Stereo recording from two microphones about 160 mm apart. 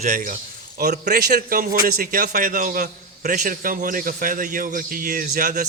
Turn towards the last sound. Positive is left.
turn(degrees=-55)  # may be behind; listen again after turning